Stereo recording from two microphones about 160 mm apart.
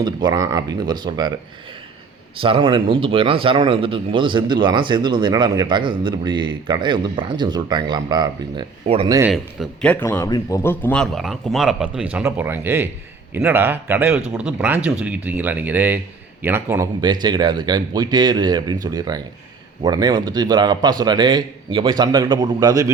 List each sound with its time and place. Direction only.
0.0 s a man's voice: 25° right (ahead or behind)
2.4 s a man's voice: 35° right (ahead or behind)
9.3 s speech: 5° left (ahead or behind); by 16.9 s 15° right (ahead or behind)
17.0 s a man's voice: 25° right (ahead or behind)